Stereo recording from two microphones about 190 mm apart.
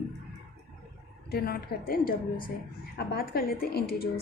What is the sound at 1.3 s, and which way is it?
A woman's voice, 55° left (ahead or behind).